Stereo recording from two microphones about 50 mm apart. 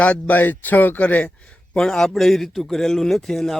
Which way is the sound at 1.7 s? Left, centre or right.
Centre.